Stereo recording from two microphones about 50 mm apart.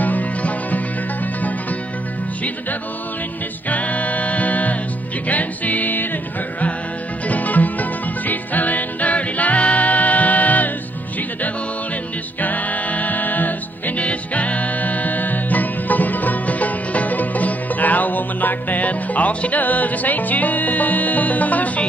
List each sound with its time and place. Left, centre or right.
0.0 s music: left
3.6 s music: left
7.2 s music: left
12.4 s music: left